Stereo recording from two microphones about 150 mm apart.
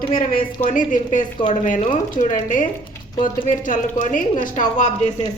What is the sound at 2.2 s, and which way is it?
A woman's voice, 60° left (ahead or behind).